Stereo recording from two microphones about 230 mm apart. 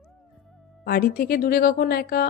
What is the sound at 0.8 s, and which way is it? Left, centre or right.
A woman's voice, left.